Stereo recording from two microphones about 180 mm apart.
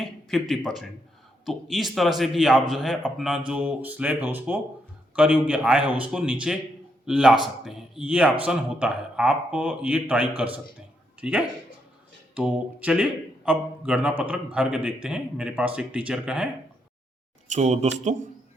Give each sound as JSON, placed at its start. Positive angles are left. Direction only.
{"t": 0.0, "sound": "a man's voice", "side_deg": 0}
{"t": 17.5, "sound": "speech", "side_deg": -35}